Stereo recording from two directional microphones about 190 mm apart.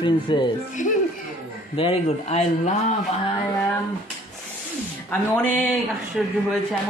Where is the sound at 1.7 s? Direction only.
30° left (ahead or behind).